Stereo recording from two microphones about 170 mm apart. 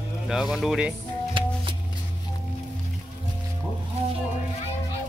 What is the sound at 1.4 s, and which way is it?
Music, 30° right (ahead or behind).